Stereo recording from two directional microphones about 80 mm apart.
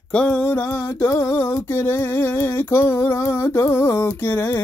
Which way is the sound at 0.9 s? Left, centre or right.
Left.